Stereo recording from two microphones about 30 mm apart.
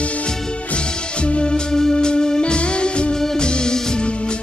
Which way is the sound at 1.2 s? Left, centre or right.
Left.